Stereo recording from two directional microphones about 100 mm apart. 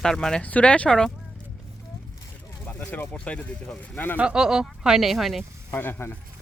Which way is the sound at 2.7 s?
15° left (ahead or behind).